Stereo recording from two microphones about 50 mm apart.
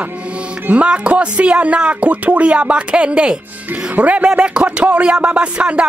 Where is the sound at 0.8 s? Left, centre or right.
Right.